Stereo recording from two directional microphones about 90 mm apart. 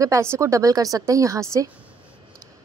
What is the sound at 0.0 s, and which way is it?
Speech, 35° right (ahead or behind).